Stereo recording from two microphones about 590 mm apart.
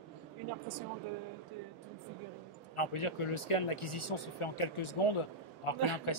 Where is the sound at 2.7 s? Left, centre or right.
Left.